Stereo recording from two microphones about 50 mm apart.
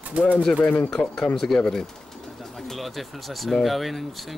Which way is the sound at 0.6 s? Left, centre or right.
Left.